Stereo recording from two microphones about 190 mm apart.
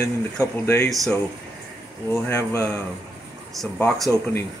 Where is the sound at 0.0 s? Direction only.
15° left (ahead or behind).